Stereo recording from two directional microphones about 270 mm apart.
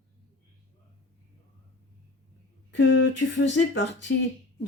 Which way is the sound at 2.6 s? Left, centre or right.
Left.